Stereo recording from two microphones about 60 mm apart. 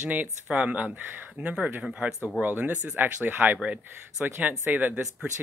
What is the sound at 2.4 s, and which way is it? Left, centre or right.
Speech, right.